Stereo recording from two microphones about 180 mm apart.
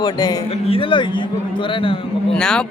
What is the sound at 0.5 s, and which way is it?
A man's voice, 30° left (ahead or behind).